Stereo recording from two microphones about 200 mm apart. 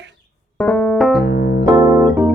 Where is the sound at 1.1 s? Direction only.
55° left (ahead or behind).